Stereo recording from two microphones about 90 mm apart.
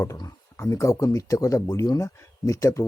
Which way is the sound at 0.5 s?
35° left (ahead or behind).